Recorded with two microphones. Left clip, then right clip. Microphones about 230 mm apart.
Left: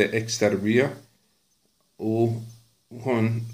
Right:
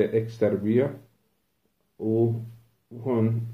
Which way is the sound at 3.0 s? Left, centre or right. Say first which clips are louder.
Left 1 dB; left.